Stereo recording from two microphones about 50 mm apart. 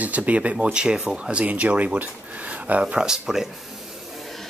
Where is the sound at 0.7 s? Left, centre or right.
Centre.